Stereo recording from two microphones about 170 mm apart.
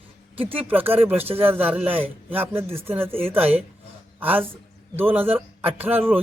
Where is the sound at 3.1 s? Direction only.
35° right (ahead or behind).